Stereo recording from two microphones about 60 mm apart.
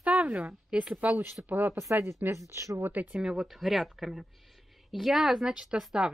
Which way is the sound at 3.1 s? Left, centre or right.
Centre.